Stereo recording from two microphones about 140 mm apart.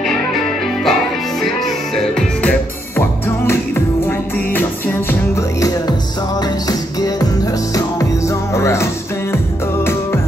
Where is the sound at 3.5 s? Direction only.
15° left (ahead or behind).